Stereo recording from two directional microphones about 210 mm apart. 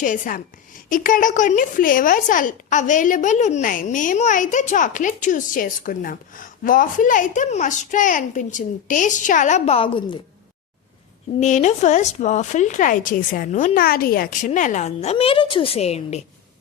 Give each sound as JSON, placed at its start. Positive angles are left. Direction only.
{"t": 0.0, "sound": "a woman's voice", "side_deg": 40}
{"t": 11.3, "sound": "a woman's voice", "side_deg": 35}